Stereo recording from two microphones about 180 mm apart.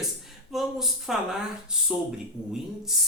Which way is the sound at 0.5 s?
Centre (ahead or behind).